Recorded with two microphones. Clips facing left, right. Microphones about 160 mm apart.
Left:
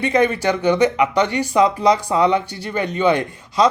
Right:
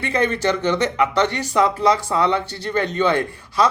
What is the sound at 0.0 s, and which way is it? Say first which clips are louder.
Speech: left 3 dB; 15° left (ahead or behind).